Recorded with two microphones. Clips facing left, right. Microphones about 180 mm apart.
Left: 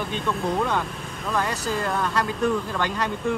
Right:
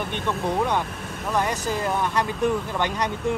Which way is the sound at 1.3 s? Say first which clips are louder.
Right 1 dB; 15° right (ahead or behind).